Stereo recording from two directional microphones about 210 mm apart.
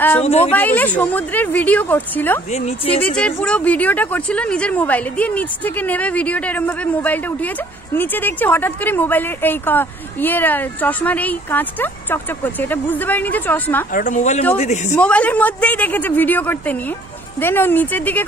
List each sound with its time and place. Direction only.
0.2 s speech: 30° left (ahead or behind)
0.5 s a woman's voice: 10° left (ahead or behind)
2.5 s speech: 30° left (ahead or behind)
3.0 s a woman's voice: 5° left (ahead or behind)
13.9 s speech: 35° left (ahead or behind)
15.0 s a woman's voice: 5° left (ahead or behind)